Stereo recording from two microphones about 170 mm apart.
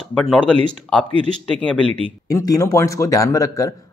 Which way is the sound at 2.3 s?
20° left (ahead or behind).